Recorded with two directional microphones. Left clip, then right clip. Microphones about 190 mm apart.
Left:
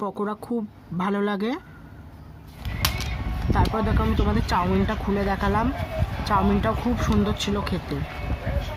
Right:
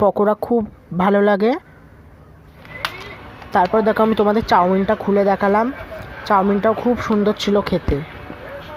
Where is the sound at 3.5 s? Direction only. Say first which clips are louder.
Right 10 dB; 35° right (ahead or behind).